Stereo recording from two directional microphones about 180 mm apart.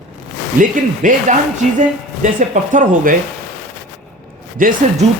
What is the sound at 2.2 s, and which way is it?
Speech, 45° right (ahead or behind).